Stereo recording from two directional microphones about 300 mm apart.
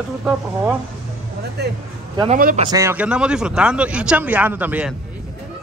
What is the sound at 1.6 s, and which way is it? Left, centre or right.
A man's voice, right.